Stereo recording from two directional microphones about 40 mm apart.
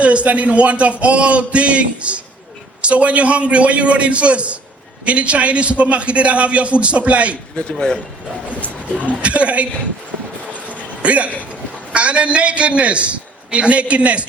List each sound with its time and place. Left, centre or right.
0.0 s a man's voice: right
8.9 s a man's voice: right
10.7 s a sound: right
11.9 s a man's voice: right